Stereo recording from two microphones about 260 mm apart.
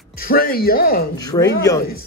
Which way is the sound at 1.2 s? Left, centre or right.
Centre.